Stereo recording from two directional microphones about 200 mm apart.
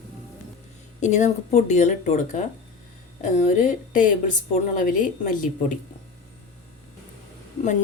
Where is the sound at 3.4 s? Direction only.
40° left (ahead or behind).